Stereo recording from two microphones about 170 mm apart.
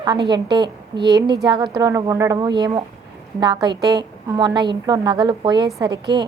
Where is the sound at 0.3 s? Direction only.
25° right (ahead or behind).